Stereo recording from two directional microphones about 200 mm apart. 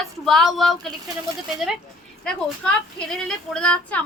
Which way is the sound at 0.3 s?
Centre (ahead or behind).